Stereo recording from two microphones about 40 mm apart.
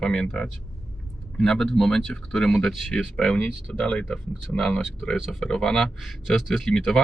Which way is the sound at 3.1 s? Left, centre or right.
Left.